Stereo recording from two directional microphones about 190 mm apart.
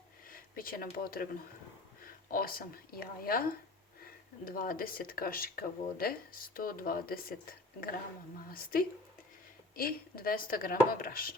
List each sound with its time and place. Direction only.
0.3 s speech: 50° left (ahead or behind)
8.4 s speech: 50° left (ahead or behind)